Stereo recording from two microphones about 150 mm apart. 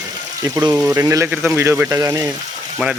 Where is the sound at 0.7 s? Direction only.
15° right (ahead or behind).